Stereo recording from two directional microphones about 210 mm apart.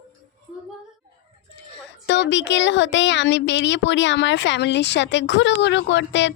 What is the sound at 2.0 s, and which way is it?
Speech, 55° left (ahead or behind).